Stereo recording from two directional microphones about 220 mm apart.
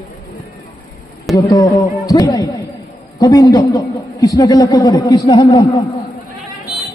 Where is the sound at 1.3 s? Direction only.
15° left (ahead or behind).